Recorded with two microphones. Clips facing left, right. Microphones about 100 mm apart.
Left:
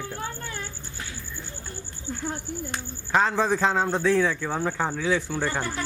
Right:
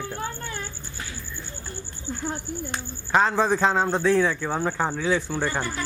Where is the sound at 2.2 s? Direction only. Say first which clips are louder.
Right 1 dB; 25° right (ahead or behind).